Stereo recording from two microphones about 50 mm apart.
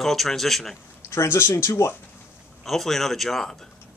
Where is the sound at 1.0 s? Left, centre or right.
Left.